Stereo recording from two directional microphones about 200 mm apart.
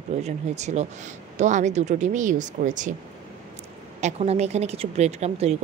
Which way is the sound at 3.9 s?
35° right (ahead or behind).